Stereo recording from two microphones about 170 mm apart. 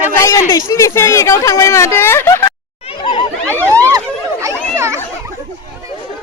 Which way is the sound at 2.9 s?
25° left (ahead or behind).